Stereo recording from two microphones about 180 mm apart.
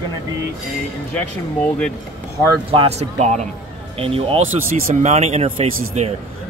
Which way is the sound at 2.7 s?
35° right (ahead or behind).